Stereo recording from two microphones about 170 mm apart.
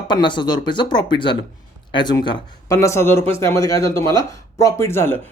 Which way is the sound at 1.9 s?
25° left (ahead or behind).